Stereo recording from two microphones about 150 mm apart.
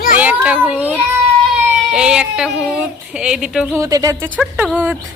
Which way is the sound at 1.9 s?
5° right (ahead or behind).